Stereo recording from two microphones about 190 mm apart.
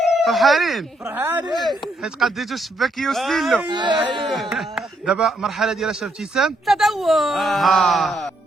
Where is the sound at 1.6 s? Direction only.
Centre (ahead or behind).